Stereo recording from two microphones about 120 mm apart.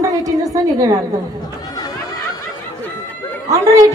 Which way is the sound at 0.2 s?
30° right (ahead or behind).